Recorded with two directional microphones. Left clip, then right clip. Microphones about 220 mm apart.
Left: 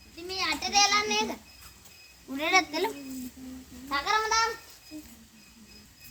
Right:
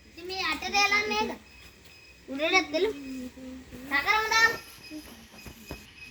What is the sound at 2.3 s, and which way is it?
Speech, 5° left (ahead or behind).